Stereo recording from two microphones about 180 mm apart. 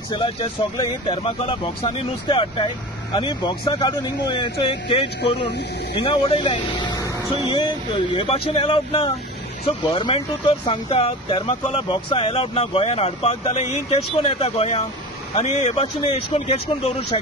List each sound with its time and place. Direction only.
0.1 s speech: 25° left (ahead or behind)